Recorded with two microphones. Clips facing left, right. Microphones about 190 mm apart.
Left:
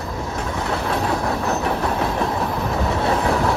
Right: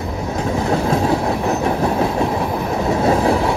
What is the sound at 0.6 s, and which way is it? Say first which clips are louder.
Train: right 5 dB; 30° right (ahead or behind).